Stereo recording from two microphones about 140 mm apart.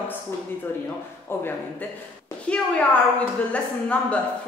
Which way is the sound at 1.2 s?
15° left (ahead or behind).